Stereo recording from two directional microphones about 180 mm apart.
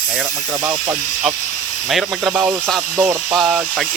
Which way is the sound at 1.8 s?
Centre (ahead or behind).